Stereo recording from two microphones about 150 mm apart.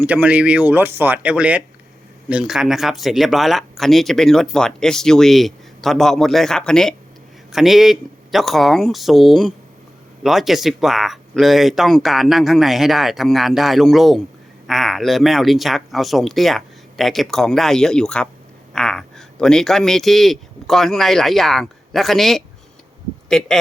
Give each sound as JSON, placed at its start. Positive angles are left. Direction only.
{"t": 0.0, "sound": "a man's voice", "side_deg": -10}